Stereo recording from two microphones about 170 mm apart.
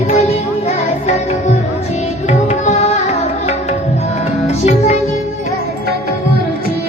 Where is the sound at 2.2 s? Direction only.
40° left (ahead or behind).